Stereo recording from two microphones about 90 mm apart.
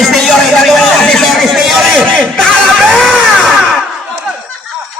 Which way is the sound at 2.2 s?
5° left (ahead or behind).